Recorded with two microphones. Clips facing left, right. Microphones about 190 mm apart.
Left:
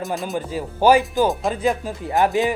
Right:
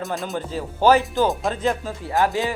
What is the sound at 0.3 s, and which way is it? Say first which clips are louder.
Speech: left 2 dB; 10° left (ahead or behind).